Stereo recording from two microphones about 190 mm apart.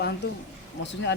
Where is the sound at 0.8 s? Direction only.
70° left (ahead or behind).